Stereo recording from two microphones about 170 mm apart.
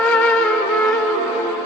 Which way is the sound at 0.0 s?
5° left (ahead or behind).